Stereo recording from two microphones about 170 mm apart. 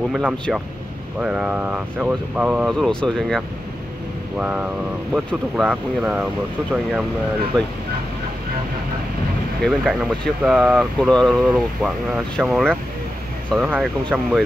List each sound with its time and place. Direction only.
0.1 s speech: 5° right (ahead or behind)
4.4 s speech: 5° right (ahead or behind)
9.6 s speech: centre (ahead or behind)